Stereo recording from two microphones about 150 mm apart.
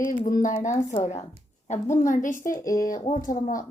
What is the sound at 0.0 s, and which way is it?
A woman's voice, 65° left (ahead or behind).